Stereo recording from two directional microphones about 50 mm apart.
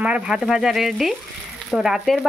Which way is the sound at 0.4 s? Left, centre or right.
Centre.